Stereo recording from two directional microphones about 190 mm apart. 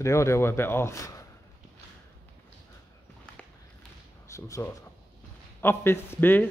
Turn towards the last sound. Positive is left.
turn(degrees=10)  # may be behind; listen again after turning